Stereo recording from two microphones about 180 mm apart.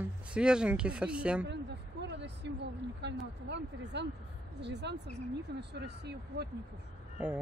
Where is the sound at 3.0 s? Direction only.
75° right (ahead or behind).